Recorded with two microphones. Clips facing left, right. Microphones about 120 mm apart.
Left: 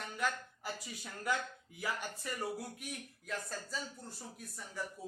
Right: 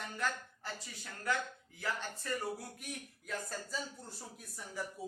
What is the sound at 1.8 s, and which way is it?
Speech, 10° left (ahead or behind).